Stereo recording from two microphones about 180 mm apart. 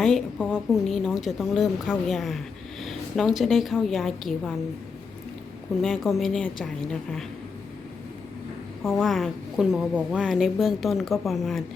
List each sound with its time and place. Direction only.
0.0 s a woman's voice: 5° left (ahead or behind)
5.8 s a woman's voice: centre (ahead or behind)
8.8 s a woman's voice: centre (ahead or behind)